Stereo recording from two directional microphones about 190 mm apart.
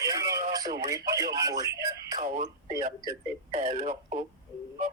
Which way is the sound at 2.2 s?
40° right (ahead or behind).